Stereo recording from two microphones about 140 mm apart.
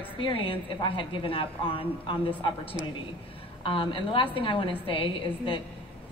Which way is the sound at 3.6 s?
40° left (ahead or behind).